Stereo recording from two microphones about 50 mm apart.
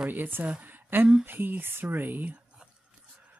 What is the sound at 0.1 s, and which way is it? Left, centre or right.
A woman's voice, right.